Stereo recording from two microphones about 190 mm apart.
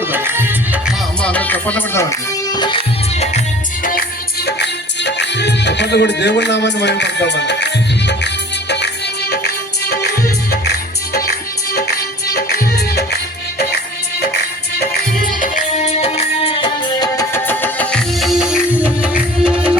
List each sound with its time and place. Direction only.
0.1 s music: 10° right (ahead or behind)
1.2 s music: 10° left (ahead or behind); by 3.4 s 30° left (ahead or behind)
4.4 s music: 65° left (ahead or behind)
9.3 s music: 55° left (ahead or behind)
14.8 s music: 45° left (ahead or behind); by 19.7 s 5° right (ahead or behind)